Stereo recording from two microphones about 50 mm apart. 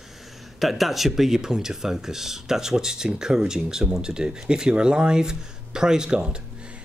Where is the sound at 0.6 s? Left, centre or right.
Centre.